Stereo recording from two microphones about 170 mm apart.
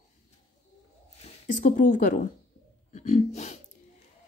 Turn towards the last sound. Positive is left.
turn(degrees=40)  # may be behind; listen again after turning